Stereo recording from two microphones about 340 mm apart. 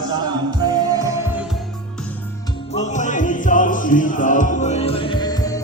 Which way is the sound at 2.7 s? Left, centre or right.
Left.